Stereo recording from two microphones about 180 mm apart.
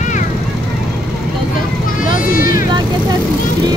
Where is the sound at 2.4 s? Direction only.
50° left (ahead or behind).